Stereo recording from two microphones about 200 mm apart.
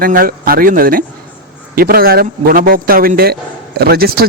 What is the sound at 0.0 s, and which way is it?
A man's voice, 45° right (ahead or behind).